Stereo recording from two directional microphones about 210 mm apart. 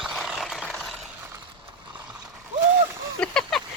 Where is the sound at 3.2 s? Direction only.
5° left (ahead or behind).